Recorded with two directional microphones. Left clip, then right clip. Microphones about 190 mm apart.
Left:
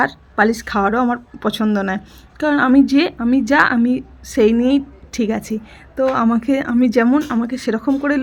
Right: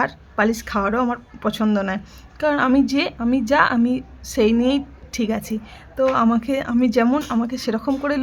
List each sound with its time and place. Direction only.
0.0 s a woman's voice: 15° left (ahead or behind)